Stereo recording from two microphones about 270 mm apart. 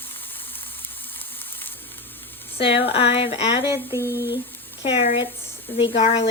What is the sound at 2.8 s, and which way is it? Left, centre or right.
Speech, left.